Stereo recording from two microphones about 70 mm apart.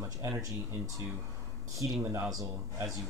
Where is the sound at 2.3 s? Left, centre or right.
Right.